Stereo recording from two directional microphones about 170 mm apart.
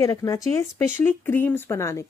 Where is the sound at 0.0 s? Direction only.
20° left (ahead or behind).